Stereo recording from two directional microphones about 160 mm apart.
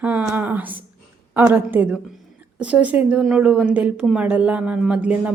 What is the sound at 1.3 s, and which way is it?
A woman's voice, 15° right (ahead or behind).